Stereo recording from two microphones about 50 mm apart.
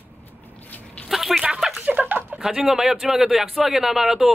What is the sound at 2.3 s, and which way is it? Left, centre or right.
A man's voice, centre.